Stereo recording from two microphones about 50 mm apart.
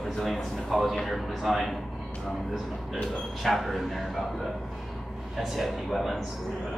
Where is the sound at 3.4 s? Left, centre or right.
Centre.